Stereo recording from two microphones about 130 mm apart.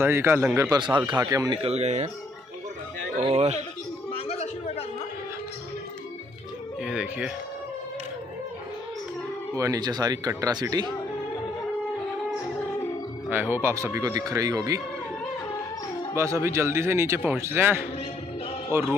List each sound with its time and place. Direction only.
0.0 s a man's voice: 20° right (ahead or behind)
0.7 s speech: 35° right (ahead or behind)
1.5 s speech: 50° right (ahead or behind)
3.3 s speech: 55° right (ahead or behind)
4.3 s music: 50° left (ahead or behind)
6.8 s speech: 5° right (ahead or behind)
9.6 s a man's voice: 30° right (ahead or behind)
13.3 s a man's voice: 15° right (ahead or behind)
16.2 s a man's voice: 20° right (ahead or behind)